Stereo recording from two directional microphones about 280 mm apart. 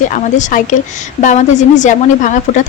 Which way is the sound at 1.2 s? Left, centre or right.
Left.